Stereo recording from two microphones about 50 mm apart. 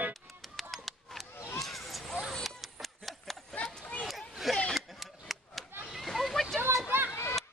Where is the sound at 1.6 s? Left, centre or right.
Centre.